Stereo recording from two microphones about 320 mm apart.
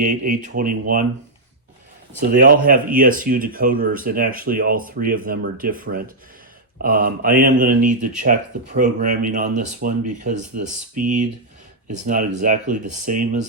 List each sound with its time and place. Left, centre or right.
0.0 s speech: right
2.3 s speech: right